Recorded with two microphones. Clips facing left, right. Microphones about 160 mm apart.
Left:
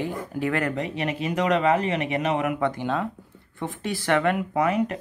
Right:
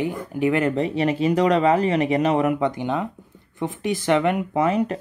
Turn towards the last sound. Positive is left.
turn(degrees=-30)  # may be behind; listen again after turning